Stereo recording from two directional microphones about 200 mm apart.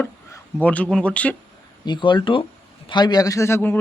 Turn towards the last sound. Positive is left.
turn(degrees=10)  # may be behind; listen again after turning